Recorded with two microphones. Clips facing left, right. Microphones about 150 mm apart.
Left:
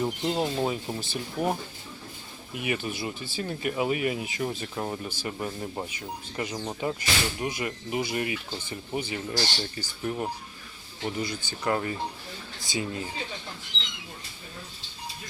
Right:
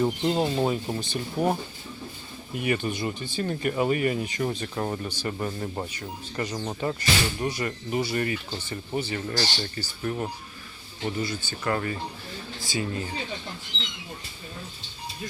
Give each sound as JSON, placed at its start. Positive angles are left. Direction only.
{"t": 0.0, "sound": "speech", "side_deg": 0}
{"t": 2.6, "sound": "speech", "side_deg": 5}